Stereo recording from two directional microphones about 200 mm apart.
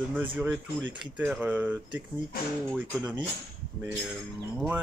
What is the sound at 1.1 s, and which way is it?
Speech, 5° right (ahead or behind).